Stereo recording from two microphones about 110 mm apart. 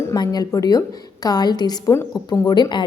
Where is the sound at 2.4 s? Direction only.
40° left (ahead or behind).